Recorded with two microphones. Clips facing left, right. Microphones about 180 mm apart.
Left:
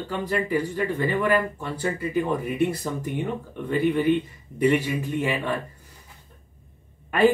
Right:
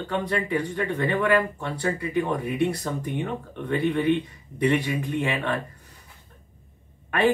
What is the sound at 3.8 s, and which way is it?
Speech, centre (ahead or behind).